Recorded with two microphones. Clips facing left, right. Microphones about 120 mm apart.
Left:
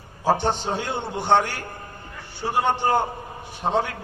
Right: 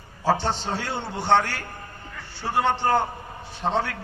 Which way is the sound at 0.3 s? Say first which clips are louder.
Left 2 dB; 15° left (ahead or behind).